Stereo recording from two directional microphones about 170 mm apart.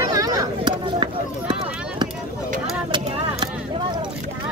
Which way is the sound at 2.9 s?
25° right (ahead or behind).